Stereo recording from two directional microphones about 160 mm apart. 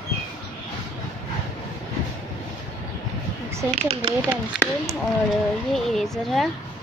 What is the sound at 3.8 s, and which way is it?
Speech, 40° right (ahead or behind).